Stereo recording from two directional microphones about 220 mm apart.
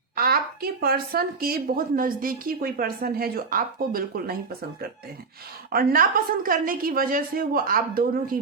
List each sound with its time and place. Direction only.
0.2 s a woman's voice: 45° right (ahead or behind)
5.7 s a woman's voice: 40° right (ahead or behind)